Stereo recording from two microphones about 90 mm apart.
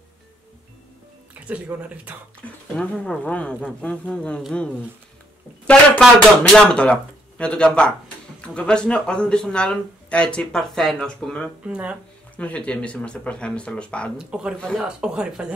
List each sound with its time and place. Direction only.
1.5 s speech: 15° right (ahead or behind)
2.4 s speech: 15° left (ahead or behind)
5.7 s speech: 5° left (ahead or behind)
11.6 s speech: 10° right (ahead or behind)
12.4 s speech: 15° left (ahead or behind)
14.1 s speech: 10° right (ahead or behind)